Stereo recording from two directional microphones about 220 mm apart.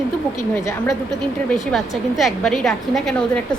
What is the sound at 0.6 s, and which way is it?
Speech, 15° left (ahead or behind).